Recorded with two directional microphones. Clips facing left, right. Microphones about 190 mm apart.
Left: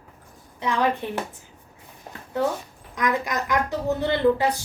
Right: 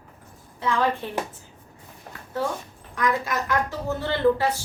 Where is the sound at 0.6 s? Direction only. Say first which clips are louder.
Even; 20° left (ahead or behind).